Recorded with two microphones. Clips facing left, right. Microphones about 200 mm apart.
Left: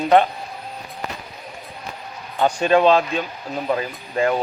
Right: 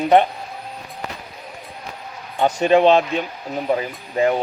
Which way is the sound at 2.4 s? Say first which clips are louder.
Right 1 dB; 20° right (ahead or behind).